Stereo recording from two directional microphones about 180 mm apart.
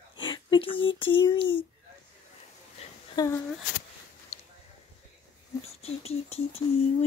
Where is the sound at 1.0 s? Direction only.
30° left (ahead or behind).